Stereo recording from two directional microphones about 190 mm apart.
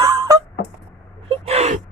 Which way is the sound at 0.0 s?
20° right (ahead or behind).